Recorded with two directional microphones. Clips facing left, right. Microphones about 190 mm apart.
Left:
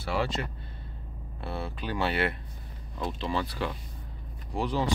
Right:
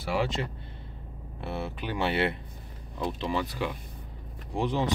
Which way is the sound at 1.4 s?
20° right (ahead or behind).